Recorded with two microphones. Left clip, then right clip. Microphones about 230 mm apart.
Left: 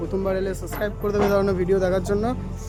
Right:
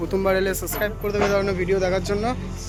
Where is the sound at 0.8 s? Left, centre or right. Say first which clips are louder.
Even; left.